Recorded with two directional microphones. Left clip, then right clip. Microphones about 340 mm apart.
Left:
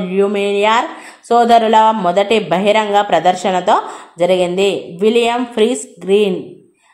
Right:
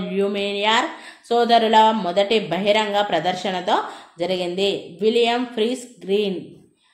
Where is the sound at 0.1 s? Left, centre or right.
Centre.